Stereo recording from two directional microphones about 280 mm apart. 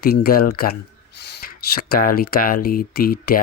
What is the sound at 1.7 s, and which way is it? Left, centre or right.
Speech, left.